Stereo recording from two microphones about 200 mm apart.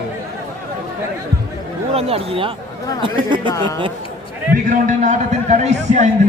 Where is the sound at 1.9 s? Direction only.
30° right (ahead or behind).